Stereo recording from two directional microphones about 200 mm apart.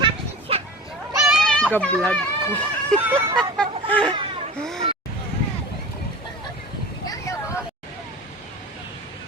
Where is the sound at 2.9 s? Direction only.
10° right (ahead or behind).